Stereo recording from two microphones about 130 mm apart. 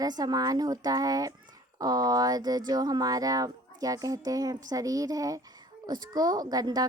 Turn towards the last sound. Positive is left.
turn(degrees=-30)  # may be behind; listen again after turning